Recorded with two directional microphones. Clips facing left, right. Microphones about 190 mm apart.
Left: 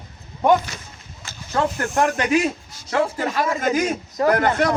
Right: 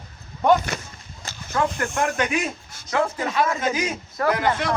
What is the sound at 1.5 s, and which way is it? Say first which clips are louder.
A man's voice: left 3 dB; 35° left (ahead or behind).